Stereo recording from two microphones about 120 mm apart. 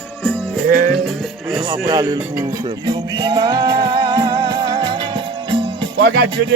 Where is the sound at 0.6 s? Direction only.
90° right.